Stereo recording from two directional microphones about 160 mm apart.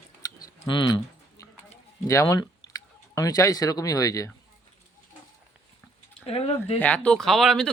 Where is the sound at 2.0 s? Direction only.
20° left (ahead or behind).